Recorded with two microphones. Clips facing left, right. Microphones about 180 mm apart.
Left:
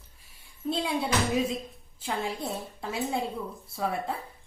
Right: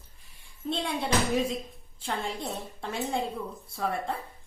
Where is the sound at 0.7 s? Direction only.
5° left (ahead or behind).